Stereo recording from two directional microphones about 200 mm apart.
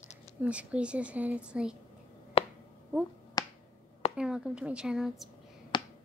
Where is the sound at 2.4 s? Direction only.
30° left (ahead or behind).